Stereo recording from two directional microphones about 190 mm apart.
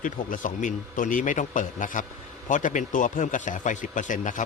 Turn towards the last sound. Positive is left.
turn(degrees=45)  # may be behind; listen again after turning